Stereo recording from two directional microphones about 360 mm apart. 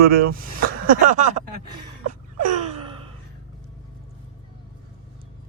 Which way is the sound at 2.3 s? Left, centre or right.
Right.